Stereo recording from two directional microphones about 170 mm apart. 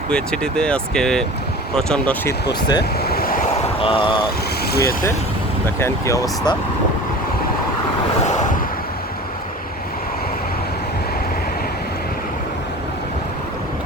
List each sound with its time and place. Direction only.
0.1 s speech: 5° left (ahead or behind)
2.2 s speech: 25° left (ahead or behind)
3.0 s waves: 65° left (ahead or behind)
3.8 s speech: 35° left (ahead or behind)
4.6 s speech: 65° left (ahead or behind)
5.6 s speech: 15° left (ahead or behind)
8.2 s vehicle: 45° left (ahead or behind)